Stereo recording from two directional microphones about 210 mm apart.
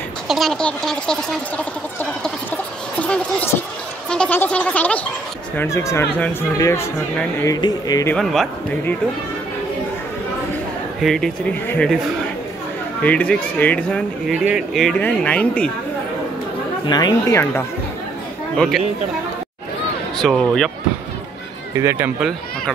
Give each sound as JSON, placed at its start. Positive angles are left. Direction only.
{"t": 0.3, "sound": "speech", "side_deg": 0}
{"t": 1.6, "sound": "a sound", "side_deg": 5}
{"t": 5.6, "sound": "speech", "side_deg": 15}
{"t": 8.1, "sound": "speech", "side_deg": 0}
{"t": 11.0, "sound": "speech", "side_deg": 0}
{"t": 13.0, "sound": "speech", "side_deg": 5}
{"t": 16.8, "sound": "speech", "side_deg": 20}
{"t": 18.6, "sound": "speech", "side_deg": 0}
{"t": 20.2, "sound": "speech", "side_deg": 0}
{"t": 21.7, "sound": "speech", "side_deg": -10}